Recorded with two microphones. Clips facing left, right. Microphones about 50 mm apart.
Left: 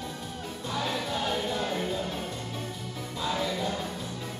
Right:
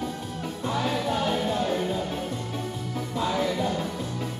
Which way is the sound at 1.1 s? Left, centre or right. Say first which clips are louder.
Right 4 dB; centre.